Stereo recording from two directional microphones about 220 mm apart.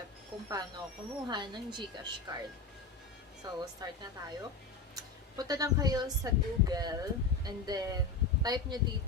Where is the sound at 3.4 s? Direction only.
20° right (ahead or behind).